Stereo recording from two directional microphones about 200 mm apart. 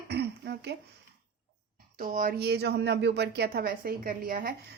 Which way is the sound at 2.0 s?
45° right (ahead or behind).